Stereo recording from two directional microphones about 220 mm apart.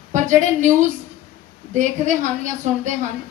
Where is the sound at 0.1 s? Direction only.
35° right (ahead or behind).